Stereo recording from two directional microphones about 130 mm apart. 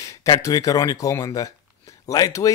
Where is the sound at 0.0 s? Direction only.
25° left (ahead or behind).